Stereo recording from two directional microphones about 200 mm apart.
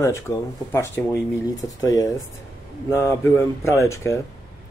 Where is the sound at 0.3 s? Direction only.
15° left (ahead or behind).